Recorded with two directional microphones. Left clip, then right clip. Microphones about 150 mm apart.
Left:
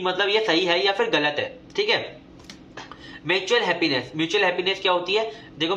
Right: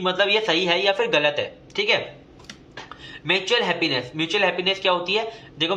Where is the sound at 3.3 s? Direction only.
15° right (ahead or behind).